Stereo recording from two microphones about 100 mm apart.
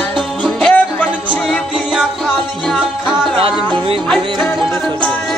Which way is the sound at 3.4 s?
65° right (ahead or behind).